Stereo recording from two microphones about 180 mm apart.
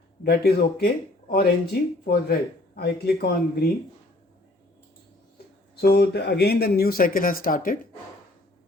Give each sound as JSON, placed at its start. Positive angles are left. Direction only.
{"t": 0.2, "sound": "speech", "side_deg": 60}
{"t": 5.8, "sound": "speech", "side_deg": 60}